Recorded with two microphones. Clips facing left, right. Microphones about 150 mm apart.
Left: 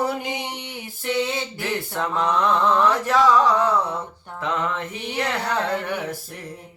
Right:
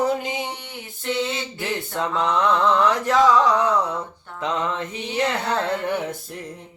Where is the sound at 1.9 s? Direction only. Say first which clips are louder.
Right 1 dB; 20° right (ahead or behind).